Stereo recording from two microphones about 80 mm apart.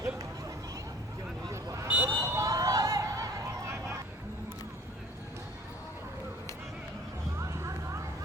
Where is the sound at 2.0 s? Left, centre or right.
Right.